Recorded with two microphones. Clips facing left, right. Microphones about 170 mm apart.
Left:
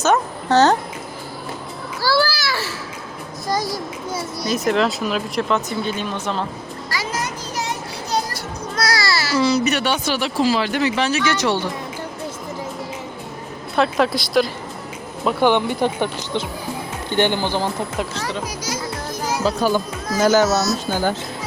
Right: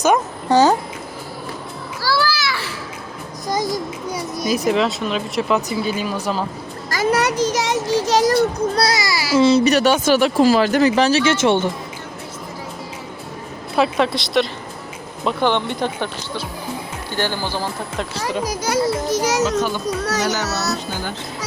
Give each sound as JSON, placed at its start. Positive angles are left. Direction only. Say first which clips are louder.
{"t": 0.0, "sound": "a child's voice", "louder": "right 1 dB", "side_deg": -10}
{"t": 2.0, "sound": "a child's voice", "louder": "left 2 dB", "side_deg": 25}
{"t": 3.4, "sound": "a child's voice", "louder": "right 2 dB", "side_deg": -20}
{"t": 4.6, "sound": "speech", "louder": "left 1 dB", "side_deg": 0}
{"t": 6.9, "sound": "a child's voice", "louder": "right 9 dB", "side_deg": -50}
{"t": 7.2, "sound": "child singing", "louder": "right 8 dB", "side_deg": -75}
{"t": 8.7, "sound": "a child's voice", "louder": "right 3 dB", "side_deg": -30}
{"t": 9.0, "sound": "a child's voice", "louder": "right 2 dB", "side_deg": -15}
{"t": 9.4, "sound": "speech", "louder": "right 6 dB", "side_deg": -25}
{"t": 13.7, "sound": "speech", "louder": "even", "side_deg": 0}
{"t": 18.6, "sound": "a child's voice", "louder": "right 8 dB", "side_deg": -75}